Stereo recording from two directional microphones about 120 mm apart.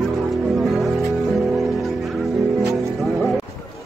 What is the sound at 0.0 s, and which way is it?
Music, centre (ahead or behind).